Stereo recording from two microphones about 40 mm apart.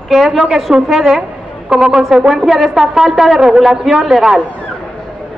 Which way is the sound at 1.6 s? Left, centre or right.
Right.